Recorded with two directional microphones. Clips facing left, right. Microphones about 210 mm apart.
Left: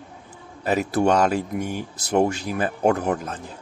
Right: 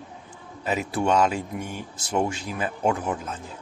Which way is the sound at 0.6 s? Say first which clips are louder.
Left 4 dB; 40° left (ahead or behind).